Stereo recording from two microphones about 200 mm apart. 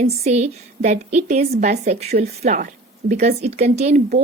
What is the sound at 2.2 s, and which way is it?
Speech, 45° right (ahead or behind).